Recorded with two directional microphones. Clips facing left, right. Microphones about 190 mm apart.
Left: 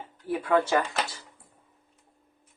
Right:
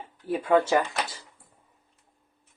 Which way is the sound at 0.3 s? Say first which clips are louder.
Right 2 dB; 25° right (ahead or behind).